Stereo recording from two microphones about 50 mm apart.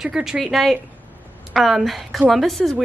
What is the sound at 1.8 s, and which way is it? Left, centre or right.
Speech, centre.